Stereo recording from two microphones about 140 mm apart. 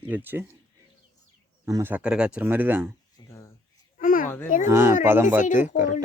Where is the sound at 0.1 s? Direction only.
15° right (ahead or behind).